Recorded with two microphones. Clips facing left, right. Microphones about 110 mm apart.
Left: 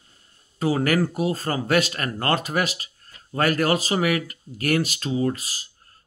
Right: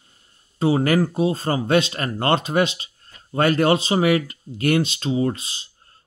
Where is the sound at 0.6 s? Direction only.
25° right (ahead or behind).